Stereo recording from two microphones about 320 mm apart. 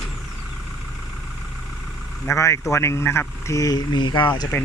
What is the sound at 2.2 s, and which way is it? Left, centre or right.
Speech, centre.